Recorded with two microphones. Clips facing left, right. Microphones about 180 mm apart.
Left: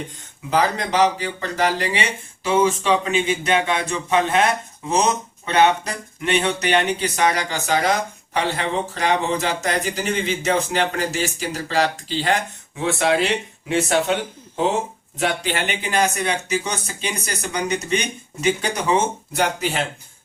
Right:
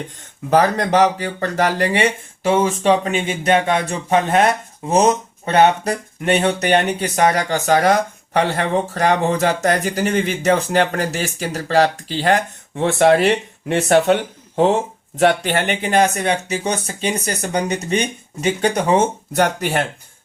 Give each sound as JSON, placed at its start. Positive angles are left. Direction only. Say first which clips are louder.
{"t": 0.5, "sound": "speech", "louder": "right 5 dB", "side_deg": -50}